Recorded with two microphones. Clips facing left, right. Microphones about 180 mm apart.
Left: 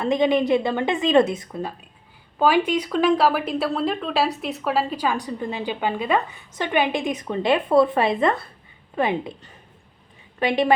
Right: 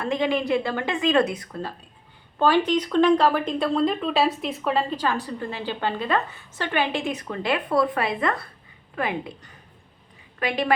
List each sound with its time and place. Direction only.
0.0 s speech: 20° left (ahead or behind)